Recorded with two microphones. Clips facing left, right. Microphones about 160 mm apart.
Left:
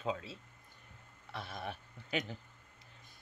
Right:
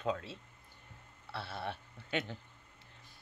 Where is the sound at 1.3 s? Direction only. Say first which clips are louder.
Right 2 dB; 35° right (ahead or behind).